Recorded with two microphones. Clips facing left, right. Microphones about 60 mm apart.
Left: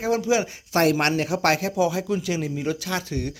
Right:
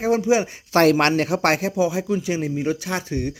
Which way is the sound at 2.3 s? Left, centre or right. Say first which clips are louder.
Right 3 dB; right.